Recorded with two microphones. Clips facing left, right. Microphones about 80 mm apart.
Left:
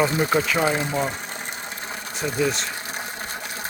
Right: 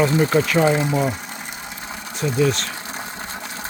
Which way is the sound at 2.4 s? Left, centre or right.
Centre.